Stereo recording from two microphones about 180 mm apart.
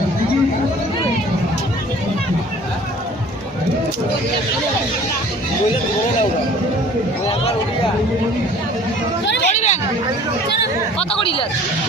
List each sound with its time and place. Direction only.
9.2 s hubbub: 75° left (ahead or behind)
9.5 s chatter: 40° left (ahead or behind)
11.1 s chatter: 30° left (ahead or behind)